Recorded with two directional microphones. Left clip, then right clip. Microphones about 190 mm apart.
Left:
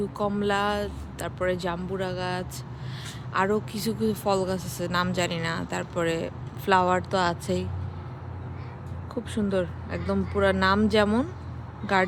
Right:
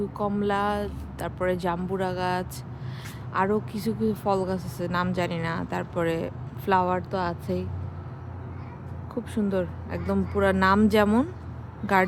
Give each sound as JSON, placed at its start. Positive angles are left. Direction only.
{"t": 0.2, "sound": "speech", "side_deg": -5}
{"t": 3.3, "sound": "speech", "side_deg": -10}
{"t": 9.3, "sound": "speech", "side_deg": -5}